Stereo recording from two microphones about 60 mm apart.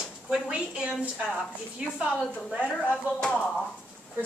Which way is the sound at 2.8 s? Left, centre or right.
Centre.